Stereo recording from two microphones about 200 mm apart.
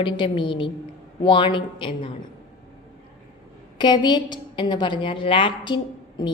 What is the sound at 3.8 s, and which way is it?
A woman's voice, 20° left (ahead or behind).